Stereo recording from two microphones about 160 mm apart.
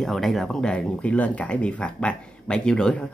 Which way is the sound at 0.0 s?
Centre (ahead or behind).